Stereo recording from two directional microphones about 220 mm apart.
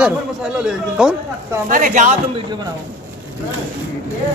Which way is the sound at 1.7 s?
35° right (ahead or behind).